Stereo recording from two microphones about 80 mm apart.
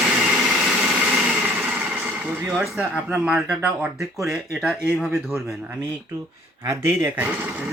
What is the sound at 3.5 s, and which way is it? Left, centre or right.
Speech, centre.